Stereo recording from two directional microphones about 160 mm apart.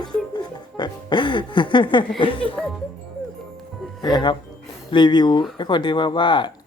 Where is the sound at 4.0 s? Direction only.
30° left (ahead or behind).